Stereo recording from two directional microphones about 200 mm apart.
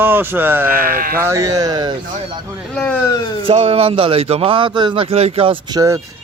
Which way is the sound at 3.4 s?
30° right (ahead or behind).